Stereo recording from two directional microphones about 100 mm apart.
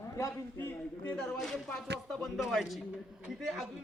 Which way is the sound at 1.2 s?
5° left (ahead or behind).